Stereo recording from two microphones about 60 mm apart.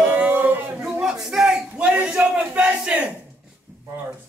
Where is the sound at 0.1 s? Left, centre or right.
Right.